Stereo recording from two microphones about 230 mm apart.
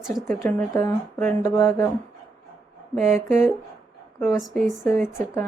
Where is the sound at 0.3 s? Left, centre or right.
Centre.